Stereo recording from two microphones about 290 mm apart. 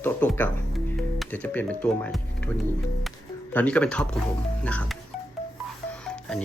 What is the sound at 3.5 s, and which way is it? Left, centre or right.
Speech, centre.